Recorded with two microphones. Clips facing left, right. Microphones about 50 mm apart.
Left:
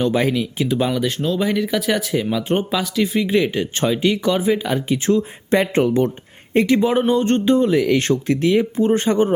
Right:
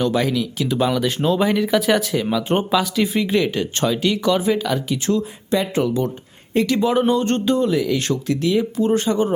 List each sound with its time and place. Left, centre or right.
0.0 s speech: centre
0.7 s speech: centre
1.0 s speech: centre
4.6 s speech: left
5.5 s speech: left
6.7 s speech: left
7.8 s speech: left